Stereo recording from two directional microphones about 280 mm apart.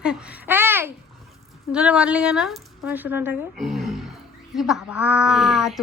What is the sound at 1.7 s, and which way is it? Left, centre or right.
A woman's voice, centre.